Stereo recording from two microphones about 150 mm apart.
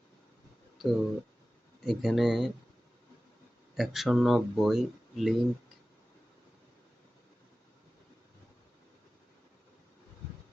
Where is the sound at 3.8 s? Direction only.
Centre (ahead or behind).